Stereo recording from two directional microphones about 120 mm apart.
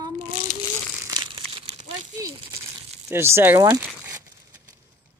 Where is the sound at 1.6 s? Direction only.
60° right (ahead or behind).